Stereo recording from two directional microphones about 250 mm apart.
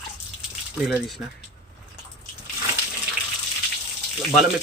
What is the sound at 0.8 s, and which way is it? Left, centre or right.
Speech, centre.